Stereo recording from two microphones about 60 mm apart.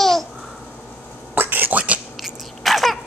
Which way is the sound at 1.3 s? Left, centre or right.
Right.